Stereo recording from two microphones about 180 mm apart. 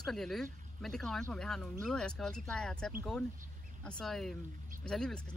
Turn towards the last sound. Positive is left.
turn(degrees=5)  # may be behind; listen again after turning